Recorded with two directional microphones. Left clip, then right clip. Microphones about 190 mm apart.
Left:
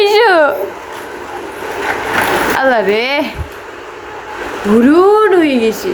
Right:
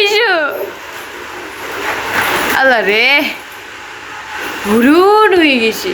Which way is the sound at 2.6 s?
15° left (ahead or behind).